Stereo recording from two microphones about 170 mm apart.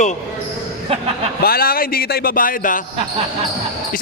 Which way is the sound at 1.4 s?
60° left (ahead or behind).